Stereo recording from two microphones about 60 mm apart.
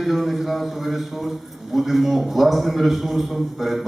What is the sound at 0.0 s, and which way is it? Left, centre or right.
A man's voice, centre.